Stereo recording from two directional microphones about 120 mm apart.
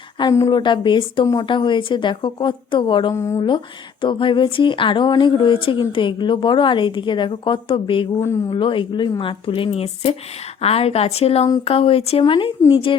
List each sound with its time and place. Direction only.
0.2 s a woman's voice: 30° left (ahead or behind)
0.6 s a woman's voice: 40° left (ahead or behind)
3.2 s speech: 25° left (ahead or behind)
4.0 s speech: 45° left (ahead or behind)